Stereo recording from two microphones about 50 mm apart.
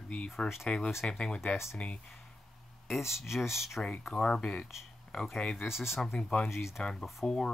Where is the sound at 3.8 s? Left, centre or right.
Centre.